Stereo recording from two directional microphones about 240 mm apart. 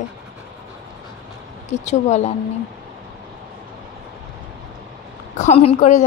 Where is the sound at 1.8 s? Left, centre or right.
Left.